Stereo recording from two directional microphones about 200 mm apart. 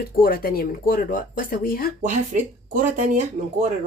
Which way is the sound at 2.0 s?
40° right (ahead or behind).